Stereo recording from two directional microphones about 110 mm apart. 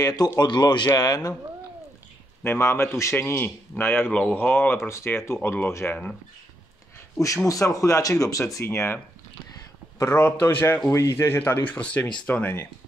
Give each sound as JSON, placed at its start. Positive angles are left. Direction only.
{"t": 0.0, "sound": "speech", "side_deg": 35}
{"t": 2.4, "sound": "a man's voice", "side_deg": 25}
{"t": 7.4, "sound": "a man's voice", "side_deg": 30}